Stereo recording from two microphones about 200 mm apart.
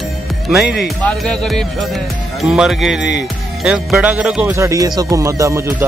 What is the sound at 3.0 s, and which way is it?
Speech, 60° left (ahead or behind).